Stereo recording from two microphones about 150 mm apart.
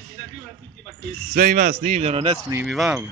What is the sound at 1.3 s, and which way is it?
A man's voice, 65° right (ahead or behind).